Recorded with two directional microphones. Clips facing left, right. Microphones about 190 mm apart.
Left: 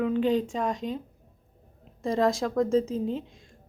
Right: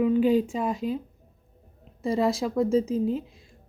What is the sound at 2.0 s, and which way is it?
A woman's voice, 5° right (ahead or behind).